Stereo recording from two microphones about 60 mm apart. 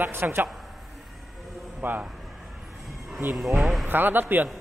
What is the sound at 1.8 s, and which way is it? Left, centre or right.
Speech, right.